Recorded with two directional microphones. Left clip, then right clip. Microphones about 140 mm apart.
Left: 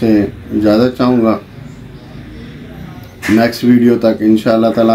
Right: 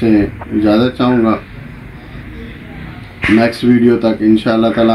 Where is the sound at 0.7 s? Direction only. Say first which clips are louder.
Left 2 dB; 10° left (ahead or behind).